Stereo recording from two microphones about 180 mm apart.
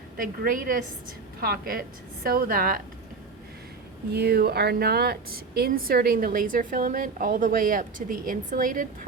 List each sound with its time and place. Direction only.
0.2 s a woman's voice: 50° right (ahead or behind)
4.1 s speech: 65° right (ahead or behind)